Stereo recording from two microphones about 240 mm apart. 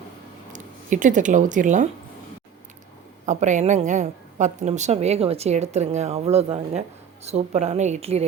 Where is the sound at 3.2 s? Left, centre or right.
Right.